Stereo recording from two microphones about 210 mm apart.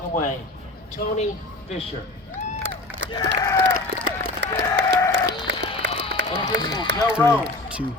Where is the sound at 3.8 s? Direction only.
50° right (ahead or behind).